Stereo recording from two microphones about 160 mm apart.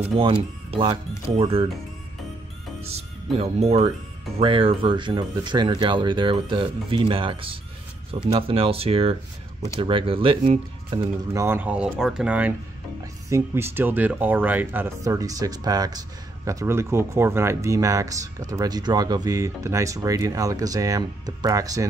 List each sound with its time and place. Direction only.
0.2 s speech: 35° right (ahead or behind)
2.8 s speech: 40° right (ahead or behind)
10.9 s speech: 15° right (ahead or behind)